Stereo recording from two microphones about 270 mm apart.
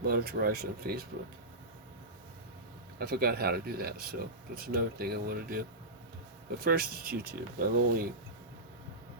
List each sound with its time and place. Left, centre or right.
0.0 s speech: right
3.0 s speech: right